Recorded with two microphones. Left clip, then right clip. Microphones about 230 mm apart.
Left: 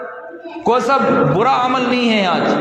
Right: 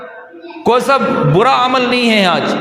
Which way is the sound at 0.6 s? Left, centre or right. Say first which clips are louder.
Right 2 dB; right.